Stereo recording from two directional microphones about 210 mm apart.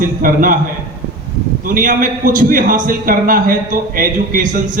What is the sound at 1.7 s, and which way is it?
A man's voice, 40° right (ahead or behind).